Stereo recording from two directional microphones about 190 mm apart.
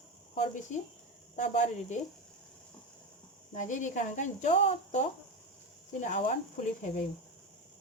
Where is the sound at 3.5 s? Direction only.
40° left (ahead or behind).